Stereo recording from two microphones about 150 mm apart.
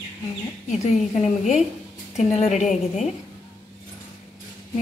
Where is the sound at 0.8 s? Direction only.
50° left (ahead or behind).